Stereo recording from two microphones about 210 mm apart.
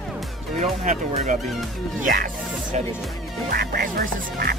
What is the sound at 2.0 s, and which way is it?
Music, 40° right (ahead or behind).